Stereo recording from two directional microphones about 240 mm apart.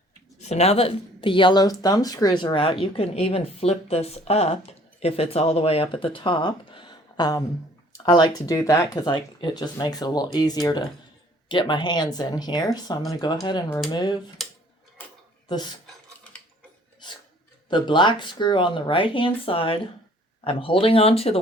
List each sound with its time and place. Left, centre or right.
0.4 s a woman's voice: left
13.7 s speech: centre
13.9 s speech: centre
15.4 s speech: centre
17.0 s filing: centre
17.7 s a woman's voice: centre